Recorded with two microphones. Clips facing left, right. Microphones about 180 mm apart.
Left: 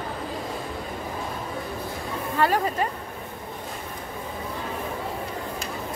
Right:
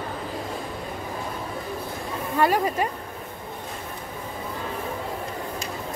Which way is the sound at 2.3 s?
15° right (ahead or behind).